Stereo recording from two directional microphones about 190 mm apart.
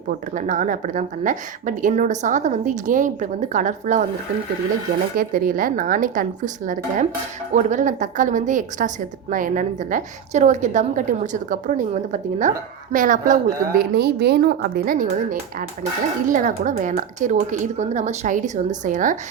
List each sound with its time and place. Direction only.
0.3 s a woman's voice: 40° right (ahead or behind)
5.1 s a woman's voice: 50° right (ahead or behind)